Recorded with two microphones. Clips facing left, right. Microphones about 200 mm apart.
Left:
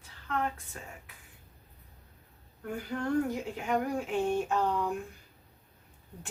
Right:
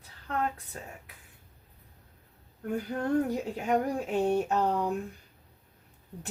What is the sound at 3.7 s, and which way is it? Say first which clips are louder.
Speech: right 2 dB; 40° right (ahead or behind).